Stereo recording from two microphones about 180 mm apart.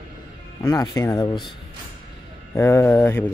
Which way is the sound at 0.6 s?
20° left (ahead or behind).